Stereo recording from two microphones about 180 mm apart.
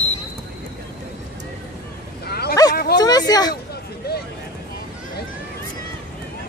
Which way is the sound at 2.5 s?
20° left (ahead or behind).